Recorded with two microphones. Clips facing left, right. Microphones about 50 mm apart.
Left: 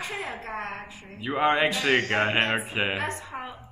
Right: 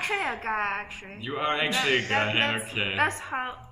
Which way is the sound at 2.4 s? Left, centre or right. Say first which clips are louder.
Left 1 dB; left.